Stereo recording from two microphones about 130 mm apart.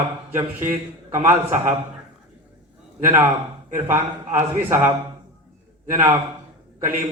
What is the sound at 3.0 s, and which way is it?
A man's voice, 15° right (ahead or behind).